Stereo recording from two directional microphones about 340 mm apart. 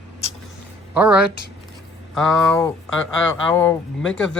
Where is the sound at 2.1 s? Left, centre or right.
Centre.